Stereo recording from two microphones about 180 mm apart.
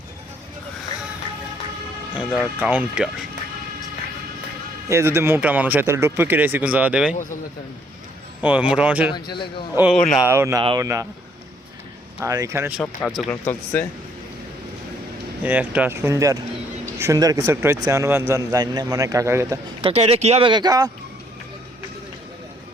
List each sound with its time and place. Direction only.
2.1 s speech: 5° right (ahead or behind)
4.9 s a man's voice: 15° right (ahead or behind)
7.1 s speech: 45° left (ahead or behind)
8.4 s a man's voice: 10° right (ahead or behind)
9.1 s a man's voice: 25° left (ahead or behind)
9.7 s speech: 5° right (ahead or behind)
10.2 s a man's voice: 15° right (ahead or behind)
10.6 s speech: 25° right (ahead or behind)
12.2 s a man's voice: 15° right (ahead or behind)
12.8 s speech: 10° left (ahead or behind)
15.4 s a man's voice: 10° right (ahead or behind)
19.8 s speech: 35° right (ahead or behind)